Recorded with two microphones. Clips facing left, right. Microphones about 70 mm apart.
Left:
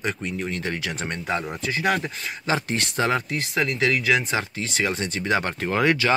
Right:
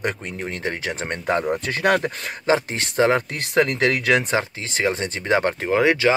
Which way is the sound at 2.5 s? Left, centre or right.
Right.